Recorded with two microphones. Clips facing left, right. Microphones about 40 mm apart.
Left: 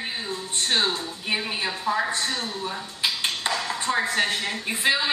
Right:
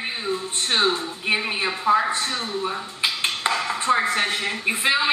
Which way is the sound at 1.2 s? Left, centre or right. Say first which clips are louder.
Right 4 dB; centre.